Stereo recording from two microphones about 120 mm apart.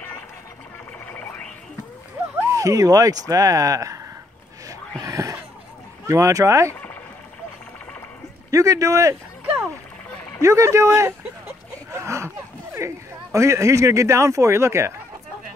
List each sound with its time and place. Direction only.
1.1 s a sound: 10° left (ahead or behind)
2.5 s speech: 30° right (ahead or behind)
5.0 s speech: 25° right (ahead or behind)
8.5 s speech: 30° right (ahead or behind)
10.4 s speech: 25° right (ahead or behind)
11.9 s a sound: 25° right (ahead or behind)
12.7 s speech: 25° right (ahead or behind)